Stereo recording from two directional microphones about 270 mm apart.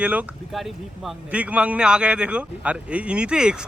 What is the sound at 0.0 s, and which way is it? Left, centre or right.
Speech, centre.